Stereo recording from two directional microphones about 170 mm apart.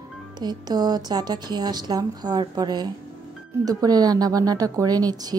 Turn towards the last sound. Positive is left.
turn(degrees=-20)  # may be behind; listen again after turning